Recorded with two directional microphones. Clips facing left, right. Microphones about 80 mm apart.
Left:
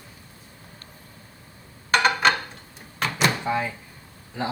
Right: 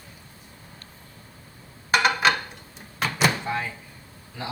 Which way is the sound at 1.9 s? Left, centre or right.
Centre.